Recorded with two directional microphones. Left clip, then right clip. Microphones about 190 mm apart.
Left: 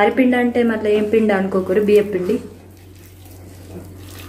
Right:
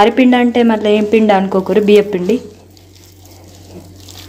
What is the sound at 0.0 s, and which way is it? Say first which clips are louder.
A woman's voice: right 5 dB; 45° right (ahead or behind).